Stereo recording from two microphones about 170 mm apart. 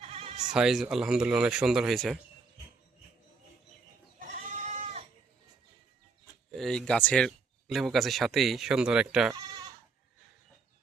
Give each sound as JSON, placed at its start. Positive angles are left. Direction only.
{"t": 0.0, "sound": "bleat", "side_deg": -35}
{"t": 0.5, "sound": "speech", "side_deg": -5}
{"t": 4.2, "sound": "goat", "side_deg": -45}
{"t": 6.6, "sound": "speech", "side_deg": 5}